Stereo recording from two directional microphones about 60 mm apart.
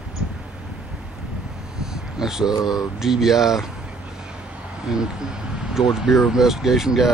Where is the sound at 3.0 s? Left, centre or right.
Centre.